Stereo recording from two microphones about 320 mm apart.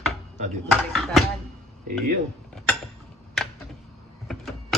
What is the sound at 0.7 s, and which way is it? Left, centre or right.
Mechanisms, centre.